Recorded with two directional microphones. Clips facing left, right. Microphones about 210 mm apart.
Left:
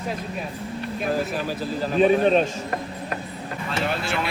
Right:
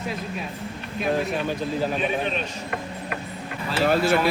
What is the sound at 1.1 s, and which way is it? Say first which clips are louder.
Speech: right 2 dB; centre (ahead or behind).